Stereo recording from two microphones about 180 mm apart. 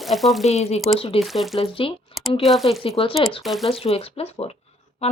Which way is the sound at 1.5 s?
30° left (ahead or behind).